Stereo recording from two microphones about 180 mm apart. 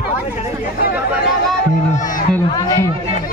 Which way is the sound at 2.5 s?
20° left (ahead or behind).